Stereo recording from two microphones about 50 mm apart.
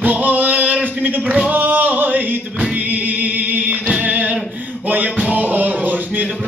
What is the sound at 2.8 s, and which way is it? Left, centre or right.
Music, right.